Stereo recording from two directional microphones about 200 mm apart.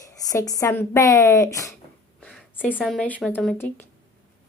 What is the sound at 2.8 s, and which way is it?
Speech, centre (ahead or behind).